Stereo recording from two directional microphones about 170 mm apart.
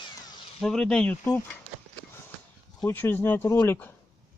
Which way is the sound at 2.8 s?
10° left (ahead or behind).